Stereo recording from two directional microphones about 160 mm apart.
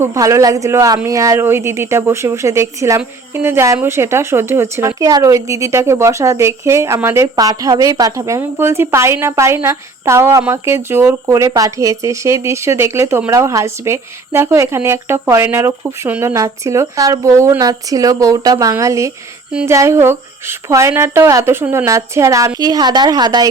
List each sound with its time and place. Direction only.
0.0 s a woman's voice: 20° right (ahead or behind)